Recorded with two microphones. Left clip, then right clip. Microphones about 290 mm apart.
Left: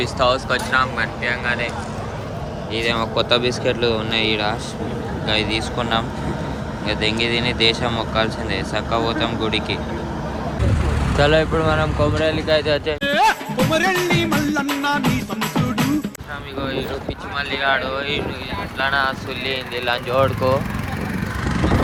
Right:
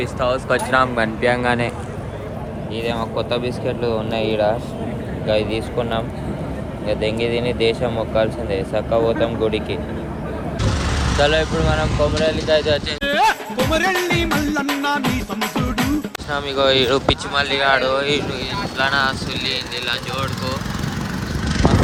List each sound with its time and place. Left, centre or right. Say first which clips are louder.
0.0 s speech: left 2 dB; centre
2.7 s speech: left 3 dB; centre
11.2 s vehicle: left 1 dB; centre
12.9 s music: left 1 dB; centre
16.3 s speech: right 10 dB; right; by 20.2 s centre